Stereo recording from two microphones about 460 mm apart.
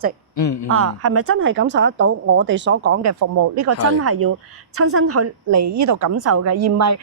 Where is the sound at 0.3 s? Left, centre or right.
Left.